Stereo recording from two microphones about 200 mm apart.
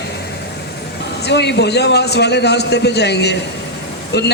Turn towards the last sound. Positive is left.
turn(degrees=55)  # may be behind; listen again after turning